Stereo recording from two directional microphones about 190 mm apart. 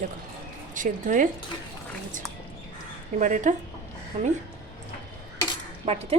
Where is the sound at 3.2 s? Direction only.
40° right (ahead or behind).